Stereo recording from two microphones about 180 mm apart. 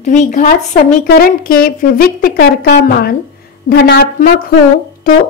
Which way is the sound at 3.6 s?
70° left (ahead or behind).